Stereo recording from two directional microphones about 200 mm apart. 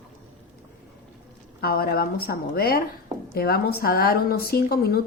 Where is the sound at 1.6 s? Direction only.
50° left (ahead or behind).